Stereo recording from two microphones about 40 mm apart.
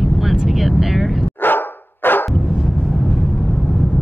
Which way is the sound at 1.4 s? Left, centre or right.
Left.